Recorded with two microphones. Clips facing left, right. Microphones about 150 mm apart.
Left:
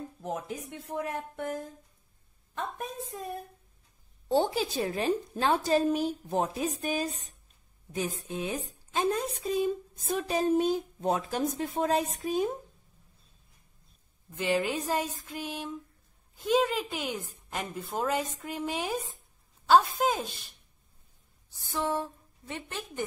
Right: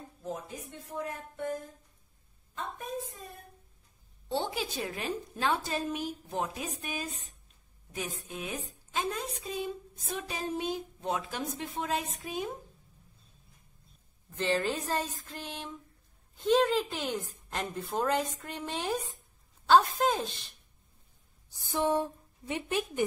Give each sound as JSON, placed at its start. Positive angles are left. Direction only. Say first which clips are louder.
{"t": 0.2, "sound": "speech", "louder": "left 3 dB", "side_deg": 75}
{"t": 4.3, "sound": "a woman's voice", "louder": "left 6 dB", "side_deg": 40}
{"t": 8.2, "sound": "a woman's voice", "louder": "left 5 dB", "side_deg": 30}
{"t": 8.9, "sound": "a woman's voice", "louder": "left 5 dB", "side_deg": 40}
{"t": 14.3, "sound": "a woman's voice", "louder": "left 1 dB", "side_deg": 10}
{"t": 21.5, "sound": "a woman's voice", "louder": "right 2 dB", "side_deg": -15}